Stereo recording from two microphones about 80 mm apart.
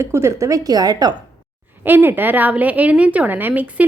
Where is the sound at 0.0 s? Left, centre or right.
Right.